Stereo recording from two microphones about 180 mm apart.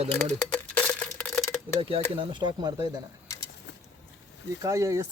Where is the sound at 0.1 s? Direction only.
10° left (ahead or behind).